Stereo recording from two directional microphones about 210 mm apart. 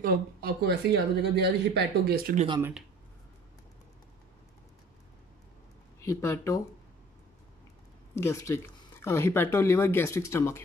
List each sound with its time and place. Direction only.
0.0 s speech: 45° right (ahead or behind)
6.0 s speech: 15° left (ahead or behind)
8.1 s speech: 10° left (ahead or behind)